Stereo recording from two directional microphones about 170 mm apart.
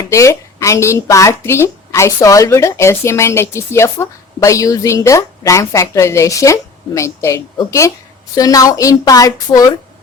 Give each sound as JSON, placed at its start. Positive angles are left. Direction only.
{"t": 0.0, "sound": "a woman's voice", "side_deg": 20}